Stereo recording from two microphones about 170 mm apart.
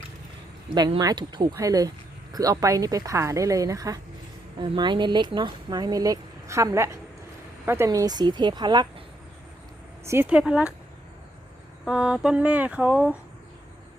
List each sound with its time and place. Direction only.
0.7 s speech: 25° right (ahead or behind)
10.1 s mantra: 10° right (ahead or behind)
11.9 s mantra: 5° right (ahead or behind)